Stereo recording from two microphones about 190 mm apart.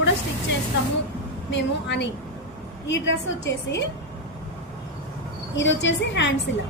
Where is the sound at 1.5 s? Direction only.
65° left (ahead or behind).